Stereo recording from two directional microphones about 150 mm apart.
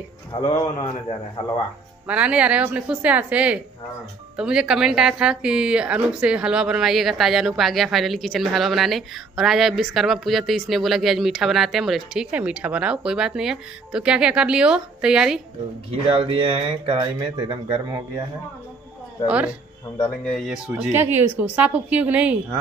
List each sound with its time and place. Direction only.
2.0 s a woman's voice: 10° right (ahead or behind)
15.9 s speech: 40° right (ahead or behind)
17.0 s speech: 25° right (ahead or behind)
19.2 s a woman's voice: 10° right (ahead or behind)
20.8 s a woman's voice: 15° right (ahead or behind)